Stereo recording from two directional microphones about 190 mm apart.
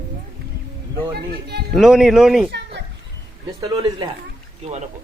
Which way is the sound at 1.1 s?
55° right (ahead or behind).